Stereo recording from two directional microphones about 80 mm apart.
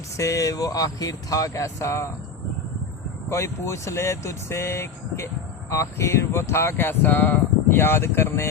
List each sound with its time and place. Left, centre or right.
0.2 s speech: left
3.2 s speech: left